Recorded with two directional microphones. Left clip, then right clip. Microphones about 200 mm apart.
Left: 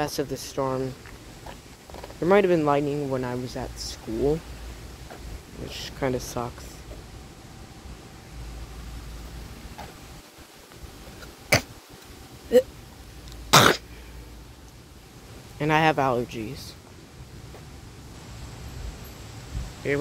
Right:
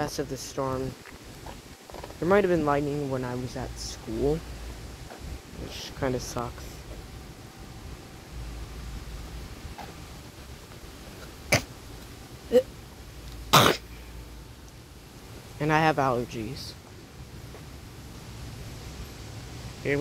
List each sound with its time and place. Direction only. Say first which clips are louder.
0.0 s speech: left 3 dB; 25° left (ahead or behind)
2.1 s speech: left 3 dB; 20° left (ahead or behind)
5.7 s speech: left 2 dB; 20° left (ahead or behind)
11.5 s tick-tock: left 3 dB; 20° left (ahead or behind)
12.5 s a sound: left 3 dB; 20° left (ahead or behind)
13.5 s cough: left 3 dB; 15° left (ahead or behind)
15.6 s speech: left 2 dB; 15° left (ahead or behind)
19.8 s speech: left 1 dB; centre (ahead or behind)